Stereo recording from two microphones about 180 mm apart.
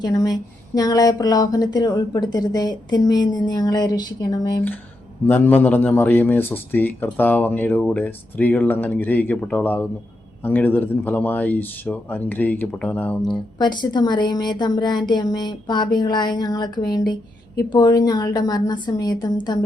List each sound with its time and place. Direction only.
0.0 s speech: 20° left (ahead or behind)
5.2 s speech: 10° left (ahead or behind)
13.6 s speech: 25° left (ahead or behind)